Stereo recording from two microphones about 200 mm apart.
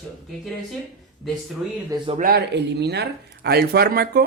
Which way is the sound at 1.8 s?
25° right (ahead or behind).